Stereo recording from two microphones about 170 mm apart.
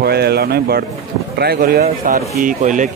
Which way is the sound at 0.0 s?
70° right (ahead or behind).